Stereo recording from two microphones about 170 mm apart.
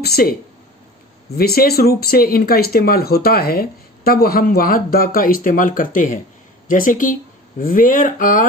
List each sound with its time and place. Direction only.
0.0 s speech: 65° left (ahead or behind)